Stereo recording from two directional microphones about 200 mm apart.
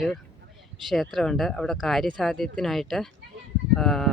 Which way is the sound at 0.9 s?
Centre (ahead or behind).